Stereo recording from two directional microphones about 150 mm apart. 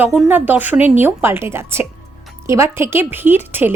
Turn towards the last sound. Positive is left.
turn(degrees=-15)  # may be behind; listen again after turning